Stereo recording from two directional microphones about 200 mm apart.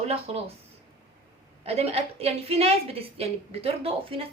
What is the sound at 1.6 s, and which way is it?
A woman's voice, 30° right (ahead or behind).